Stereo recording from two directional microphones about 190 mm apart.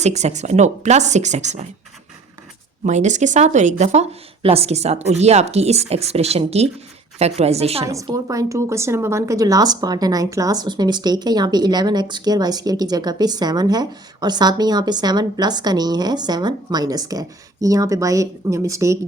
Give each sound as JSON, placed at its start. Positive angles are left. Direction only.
{"t": 0.0, "sound": "speech", "side_deg": -35}
{"t": 2.8, "sound": "speech", "side_deg": -40}
{"t": 7.9, "sound": "a woman's voice", "side_deg": -15}